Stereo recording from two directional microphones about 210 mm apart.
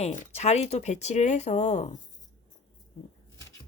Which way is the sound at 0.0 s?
30° left (ahead or behind).